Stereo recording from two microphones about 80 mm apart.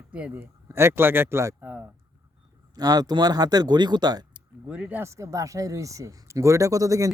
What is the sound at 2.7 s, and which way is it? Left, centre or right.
Speech, right.